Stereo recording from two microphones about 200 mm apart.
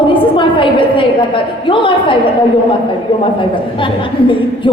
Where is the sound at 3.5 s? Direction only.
25° left (ahead or behind).